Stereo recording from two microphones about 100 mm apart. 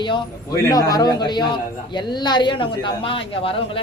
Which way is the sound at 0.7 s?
40° left (ahead or behind).